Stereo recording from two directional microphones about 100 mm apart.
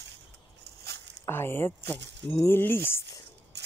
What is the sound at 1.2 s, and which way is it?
Speech, 25° left (ahead or behind).